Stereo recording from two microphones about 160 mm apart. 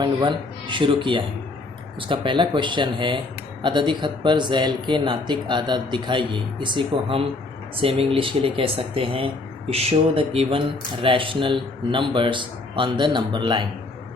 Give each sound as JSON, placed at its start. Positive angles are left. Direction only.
{"t": 0.0, "sound": "a man's voice", "side_deg": -30}